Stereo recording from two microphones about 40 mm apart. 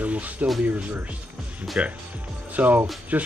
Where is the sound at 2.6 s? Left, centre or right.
Right.